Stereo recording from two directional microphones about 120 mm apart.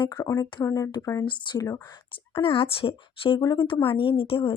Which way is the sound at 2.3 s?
50° left (ahead or behind).